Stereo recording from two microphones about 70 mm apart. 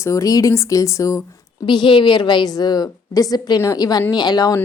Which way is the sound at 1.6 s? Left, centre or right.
Left.